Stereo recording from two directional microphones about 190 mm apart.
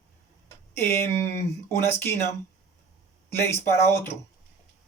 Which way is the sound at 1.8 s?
15° left (ahead or behind).